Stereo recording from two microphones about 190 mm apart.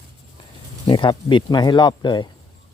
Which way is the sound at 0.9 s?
25° left (ahead or behind).